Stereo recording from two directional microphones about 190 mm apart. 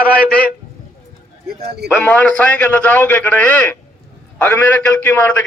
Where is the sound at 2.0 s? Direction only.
5° left (ahead or behind).